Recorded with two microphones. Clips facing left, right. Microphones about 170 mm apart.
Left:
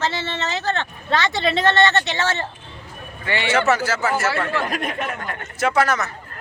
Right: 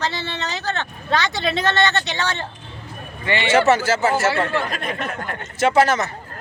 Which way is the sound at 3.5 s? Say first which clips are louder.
Right 4 dB; 25° right (ahead or behind).